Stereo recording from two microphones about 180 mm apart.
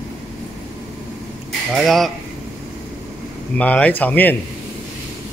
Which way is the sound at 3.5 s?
5° left (ahead or behind).